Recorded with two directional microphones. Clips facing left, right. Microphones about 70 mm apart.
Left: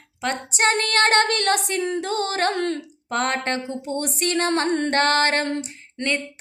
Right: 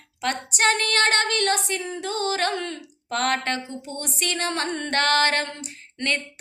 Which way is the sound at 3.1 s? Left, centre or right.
Left.